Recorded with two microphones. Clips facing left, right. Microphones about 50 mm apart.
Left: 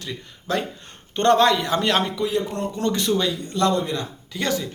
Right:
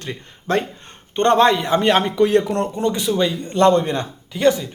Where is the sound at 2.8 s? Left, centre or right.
Centre.